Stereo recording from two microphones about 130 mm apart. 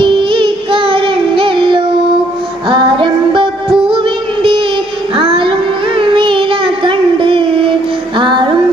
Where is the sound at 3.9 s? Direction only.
40° right (ahead or behind).